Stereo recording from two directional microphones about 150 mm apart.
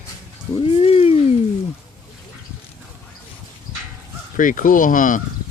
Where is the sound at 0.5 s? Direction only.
40° left (ahead or behind).